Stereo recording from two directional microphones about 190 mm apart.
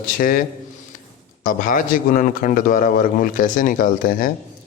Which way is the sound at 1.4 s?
45° left (ahead or behind).